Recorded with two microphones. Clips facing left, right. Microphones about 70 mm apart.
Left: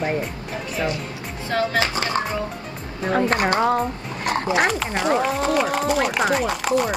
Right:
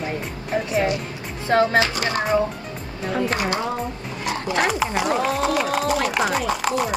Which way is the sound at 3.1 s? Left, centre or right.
Left.